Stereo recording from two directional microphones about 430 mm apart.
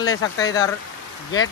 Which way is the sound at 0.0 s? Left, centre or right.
Centre.